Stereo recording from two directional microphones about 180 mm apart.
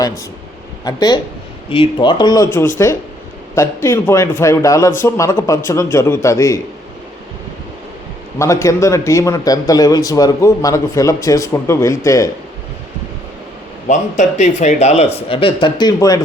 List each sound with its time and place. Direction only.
0.9 s speech: 20° left (ahead or behind)
8.4 s speech: 15° left (ahead or behind)
13.8 s speech: 45° left (ahead or behind); by 16.2 s 20° left (ahead or behind)